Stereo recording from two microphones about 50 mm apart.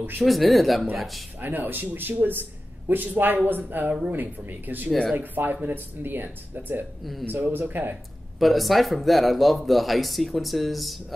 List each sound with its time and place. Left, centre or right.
0.2 s speech: centre
1.4 s speech: right
8.4 s speech: centre